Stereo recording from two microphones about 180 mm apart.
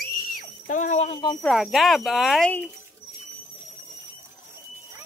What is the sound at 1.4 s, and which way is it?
Speech, centre (ahead or behind).